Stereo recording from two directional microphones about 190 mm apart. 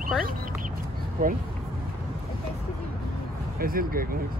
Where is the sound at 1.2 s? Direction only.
45° right (ahead or behind).